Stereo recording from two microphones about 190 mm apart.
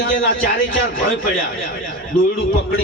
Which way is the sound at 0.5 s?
90° left.